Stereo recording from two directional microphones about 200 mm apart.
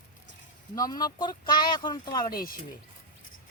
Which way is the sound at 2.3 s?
45° left (ahead or behind).